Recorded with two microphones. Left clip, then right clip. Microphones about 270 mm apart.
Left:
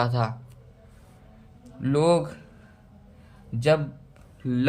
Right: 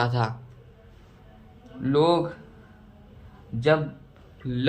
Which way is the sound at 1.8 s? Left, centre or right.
Left.